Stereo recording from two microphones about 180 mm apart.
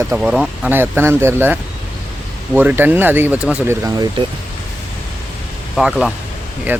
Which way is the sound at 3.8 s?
20° right (ahead or behind).